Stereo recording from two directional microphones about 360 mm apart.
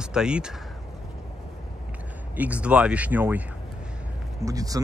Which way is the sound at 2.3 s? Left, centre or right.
Centre.